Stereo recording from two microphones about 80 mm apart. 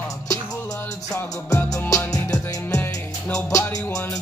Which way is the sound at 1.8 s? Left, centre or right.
Left.